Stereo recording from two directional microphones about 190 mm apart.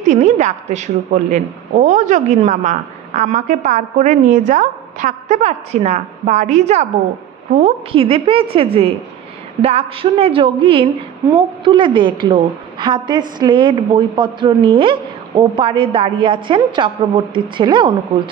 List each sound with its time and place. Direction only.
0.0 s a woman's voice: 40° right (ahead or behind)